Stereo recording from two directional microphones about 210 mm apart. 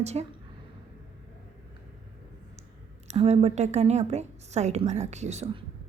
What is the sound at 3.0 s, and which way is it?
A woman's voice, 30° right (ahead or behind).